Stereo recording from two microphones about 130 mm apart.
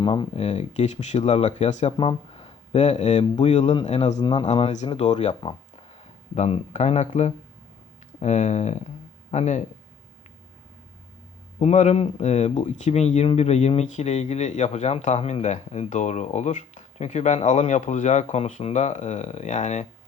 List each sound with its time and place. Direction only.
0.0 s speech: 40° left (ahead or behind)
0.3 s speech: 55° left (ahead or behind)
2.0 s speech: 45° left (ahead or behind)
4.2 s speech: 40° left (ahead or behind)
4.4 s speech: 55° left (ahead or behind)
11.6 s speech: 60° left (ahead or behind)